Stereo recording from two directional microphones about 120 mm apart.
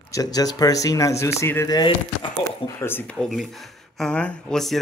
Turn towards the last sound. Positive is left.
turn(degrees=5)  # may be behind; listen again after turning